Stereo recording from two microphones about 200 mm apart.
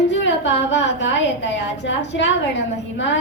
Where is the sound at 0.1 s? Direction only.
65° left (ahead or behind).